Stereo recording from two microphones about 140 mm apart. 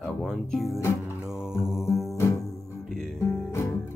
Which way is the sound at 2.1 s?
20° left (ahead or behind).